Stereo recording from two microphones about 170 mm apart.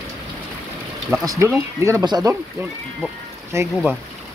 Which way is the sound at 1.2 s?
20° right (ahead or behind).